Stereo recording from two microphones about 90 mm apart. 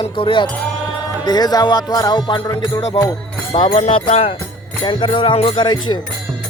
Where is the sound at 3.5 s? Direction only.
60° left (ahead or behind); by 4.4 s 85° left.